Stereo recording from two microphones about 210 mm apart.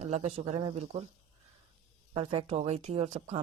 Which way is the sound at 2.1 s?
30° right (ahead or behind).